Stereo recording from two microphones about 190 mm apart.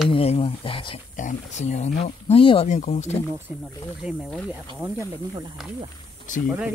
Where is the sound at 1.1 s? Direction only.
40° left (ahead or behind).